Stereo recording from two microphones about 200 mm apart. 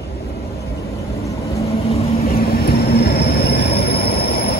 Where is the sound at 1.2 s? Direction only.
15° left (ahead or behind).